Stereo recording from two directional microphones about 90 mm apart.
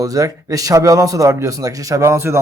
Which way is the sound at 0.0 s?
40° right (ahead or behind).